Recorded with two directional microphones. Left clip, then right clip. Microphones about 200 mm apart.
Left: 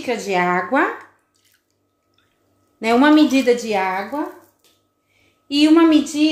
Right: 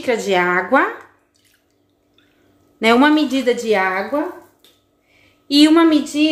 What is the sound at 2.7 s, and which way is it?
A woman's voice, 30° right (ahead or behind).